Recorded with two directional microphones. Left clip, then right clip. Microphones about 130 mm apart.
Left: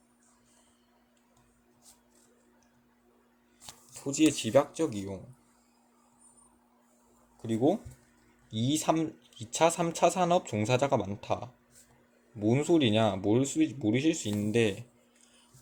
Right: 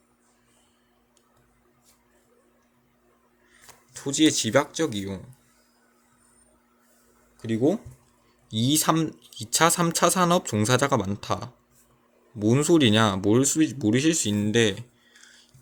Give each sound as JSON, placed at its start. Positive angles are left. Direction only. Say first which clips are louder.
{"t": 3.9, "sound": "speech", "louder": "right 5 dB", "side_deg": -25}
{"t": 8.5, "sound": "speech", "louder": "right 6 dB", "side_deg": -45}
{"t": 14.3, "sound": "speech", "louder": "right 6 dB", "side_deg": -30}